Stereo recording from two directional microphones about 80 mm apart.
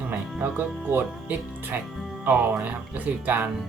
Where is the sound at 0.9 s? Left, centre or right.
Right.